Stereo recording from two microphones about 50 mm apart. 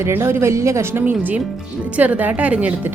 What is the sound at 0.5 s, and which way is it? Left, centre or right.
Speech, right.